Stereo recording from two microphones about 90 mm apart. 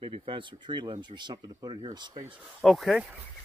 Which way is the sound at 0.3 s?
70° right (ahead or behind).